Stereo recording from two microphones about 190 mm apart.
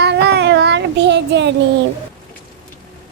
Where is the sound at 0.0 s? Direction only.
60° right (ahead or behind).